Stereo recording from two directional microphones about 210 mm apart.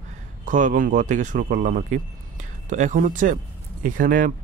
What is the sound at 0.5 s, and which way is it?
Speech, 40° right (ahead or behind).